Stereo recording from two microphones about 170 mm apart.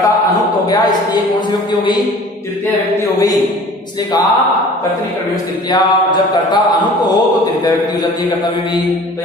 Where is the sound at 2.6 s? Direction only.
20° left (ahead or behind).